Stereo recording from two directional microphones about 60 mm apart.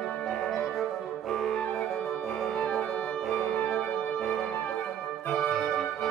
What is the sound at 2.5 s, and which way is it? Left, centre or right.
Music, left.